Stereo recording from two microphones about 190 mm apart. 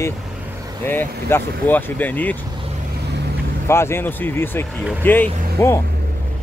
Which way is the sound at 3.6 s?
15° left (ahead or behind).